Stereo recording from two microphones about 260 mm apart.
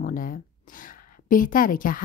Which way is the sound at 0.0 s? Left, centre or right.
Left.